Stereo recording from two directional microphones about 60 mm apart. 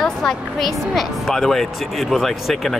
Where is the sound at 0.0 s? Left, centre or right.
Centre.